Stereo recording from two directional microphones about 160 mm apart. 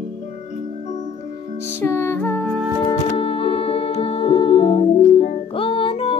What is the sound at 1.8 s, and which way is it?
Music, 15° left (ahead or behind).